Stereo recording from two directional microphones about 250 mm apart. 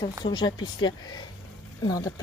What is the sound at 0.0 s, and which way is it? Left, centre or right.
Speech, centre.